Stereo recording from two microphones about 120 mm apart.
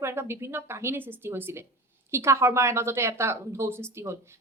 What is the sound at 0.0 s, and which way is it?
A woman's voice, 20° right (ahead or behind).